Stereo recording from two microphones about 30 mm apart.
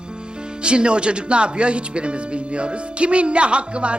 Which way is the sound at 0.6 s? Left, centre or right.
Right.